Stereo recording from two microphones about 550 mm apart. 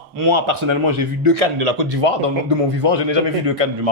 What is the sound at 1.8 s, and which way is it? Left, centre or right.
Speech, right.